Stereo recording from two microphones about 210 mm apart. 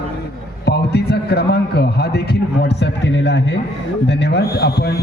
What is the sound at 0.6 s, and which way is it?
A man's voice, 50° left (ahead or behind).